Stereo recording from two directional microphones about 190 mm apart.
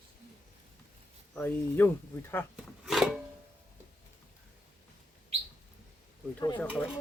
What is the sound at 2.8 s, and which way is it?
Music, centre (ahead or behind).